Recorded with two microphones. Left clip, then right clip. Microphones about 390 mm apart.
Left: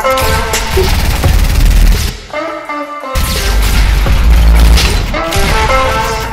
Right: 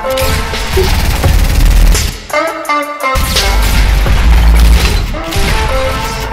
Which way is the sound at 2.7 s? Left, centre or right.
Right.